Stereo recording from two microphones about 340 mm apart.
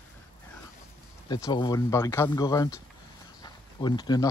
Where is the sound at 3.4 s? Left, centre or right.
Centre.